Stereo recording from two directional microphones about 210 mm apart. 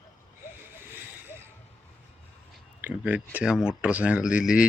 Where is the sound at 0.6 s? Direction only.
10° right (ahead or behind).